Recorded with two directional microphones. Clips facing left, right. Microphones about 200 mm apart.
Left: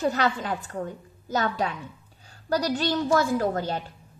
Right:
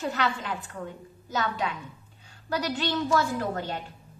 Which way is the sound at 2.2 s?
40° left (ahead or behind).